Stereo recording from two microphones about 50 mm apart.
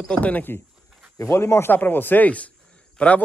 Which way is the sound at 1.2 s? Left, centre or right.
Left.